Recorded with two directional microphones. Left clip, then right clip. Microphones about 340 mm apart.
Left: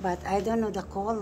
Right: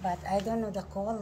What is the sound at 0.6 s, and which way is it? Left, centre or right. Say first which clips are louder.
Speech: left 4 dB; centre.